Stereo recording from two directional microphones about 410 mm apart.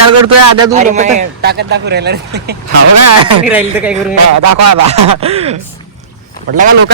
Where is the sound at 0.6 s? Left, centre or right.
Centre.